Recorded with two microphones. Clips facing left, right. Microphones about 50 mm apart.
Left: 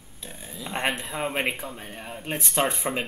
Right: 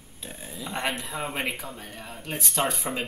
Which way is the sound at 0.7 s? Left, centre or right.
Left.